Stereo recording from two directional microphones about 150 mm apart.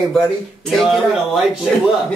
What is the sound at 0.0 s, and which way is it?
Speech, centre (ahead or behind).